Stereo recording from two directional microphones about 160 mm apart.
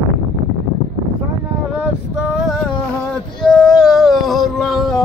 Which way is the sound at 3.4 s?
Centre (ahead or behind).